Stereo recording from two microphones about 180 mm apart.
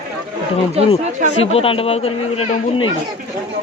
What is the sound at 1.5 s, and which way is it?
Speech, 30° left (ahead or behind).